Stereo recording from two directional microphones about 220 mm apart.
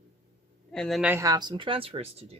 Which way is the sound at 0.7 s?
Centre (ahead or behind).